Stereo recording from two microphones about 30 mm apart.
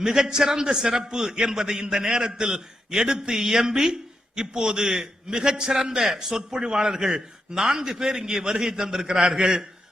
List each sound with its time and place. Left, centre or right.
0.0 s a man's voice: right